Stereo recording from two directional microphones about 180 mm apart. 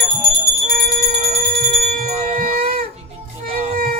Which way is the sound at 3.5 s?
35° right (ahead or behind).